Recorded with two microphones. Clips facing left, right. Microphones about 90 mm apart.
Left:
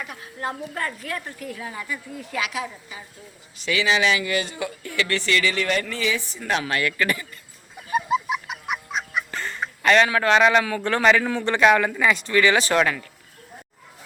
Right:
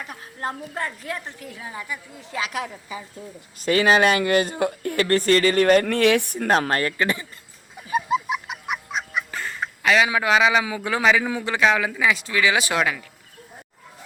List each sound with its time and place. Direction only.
0.0 s a woman's voice: 35° right (ahead or behind)
0.7 s a woman's voice: 20° right (ahead or behind)
3.6 s speech: 45° right (ahead or behind)
6.9 s a woman's voice: 25° right (ahead or behind)
7.8 s goose: centre (ahead or behind)
10.1 s a man's voice: 10° right (ahead or behind)